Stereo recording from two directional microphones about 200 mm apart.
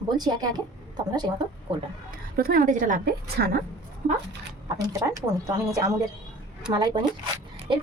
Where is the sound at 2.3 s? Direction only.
45° right (ahead or behind).